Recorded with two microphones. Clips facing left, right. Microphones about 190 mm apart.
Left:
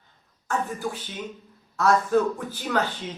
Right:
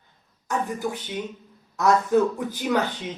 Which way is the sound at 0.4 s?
20° right (ahead or behind).